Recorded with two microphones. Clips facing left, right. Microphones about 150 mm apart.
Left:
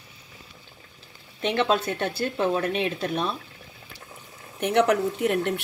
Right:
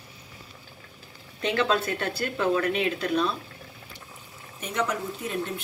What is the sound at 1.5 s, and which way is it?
Speech, 25° left (ahead or behind).